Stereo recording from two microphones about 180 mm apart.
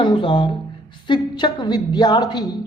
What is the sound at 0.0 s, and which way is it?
A woman's voice, 25° left (ahead or behind).